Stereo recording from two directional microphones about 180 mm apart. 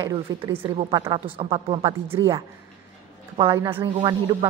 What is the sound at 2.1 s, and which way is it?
A woman's voice, 15° right (ahead or behind).